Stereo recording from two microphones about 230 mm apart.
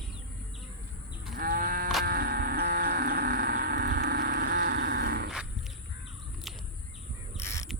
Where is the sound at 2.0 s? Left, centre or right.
Right.